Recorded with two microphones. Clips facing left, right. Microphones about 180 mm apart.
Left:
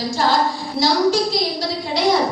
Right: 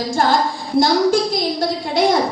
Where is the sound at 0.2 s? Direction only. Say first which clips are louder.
Right 1 dB; 50° right (ahead or behind).